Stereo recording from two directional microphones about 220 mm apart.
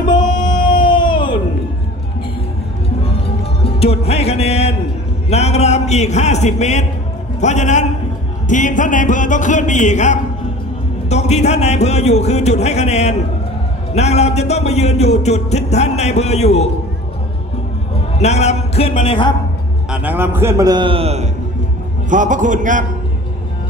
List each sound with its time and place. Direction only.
0.8 s a sound: 20° left (ahead or behind)
3.6 s music: 25° left (ahead or behind)
5.3 s a man's voice: 30° left (ahead or behind)
11.1 s music: 30° left (ahead or behind)
18.2 s music: 30° left (ahead or behind)
19.9 s a man's voice: 5° right (ahead or behind); by 22.8 s 35° right (ahead or behind)